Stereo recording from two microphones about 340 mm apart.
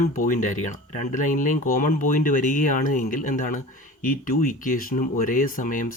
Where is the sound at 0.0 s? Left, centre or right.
Left.